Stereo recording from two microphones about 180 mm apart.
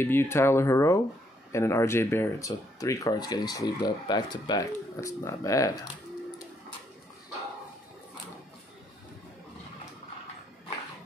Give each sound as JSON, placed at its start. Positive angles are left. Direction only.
{"t": 0.0, "sound": "speech", "side_deg": 15}